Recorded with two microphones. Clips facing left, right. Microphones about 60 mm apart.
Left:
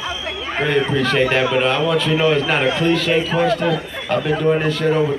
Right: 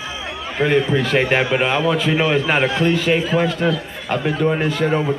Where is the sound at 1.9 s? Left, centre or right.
Centre.